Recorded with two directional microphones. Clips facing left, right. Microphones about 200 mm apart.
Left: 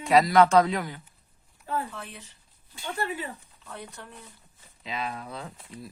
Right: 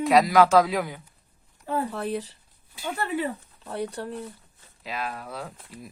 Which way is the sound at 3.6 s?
35° right (ahead or behind).